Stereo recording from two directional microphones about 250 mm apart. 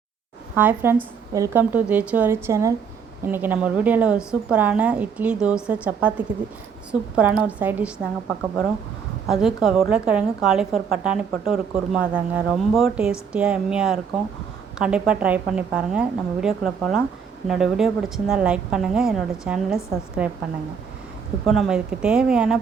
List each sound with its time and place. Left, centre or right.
0.5 s a woman's voice: centre
7.2 s a woman's voice: centre
9.2 s a woman's voice: centre
21.4 s a woman's voice: centre